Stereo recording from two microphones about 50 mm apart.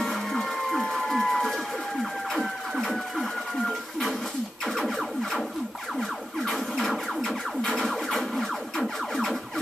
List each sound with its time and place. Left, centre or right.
0.0 s music: centre
1.0 s a sound: centre
2.7 s printer: centre
4.6 s music: centre